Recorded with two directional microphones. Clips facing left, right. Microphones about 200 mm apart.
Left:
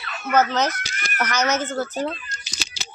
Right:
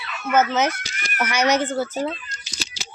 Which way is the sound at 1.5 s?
10° right (ahead or behind).